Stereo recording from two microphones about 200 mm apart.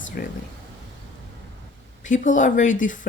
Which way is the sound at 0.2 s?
50° left (ahead or behind).